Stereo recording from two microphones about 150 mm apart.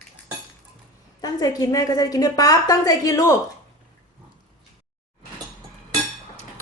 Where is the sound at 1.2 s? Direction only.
25° left (ahead or behind).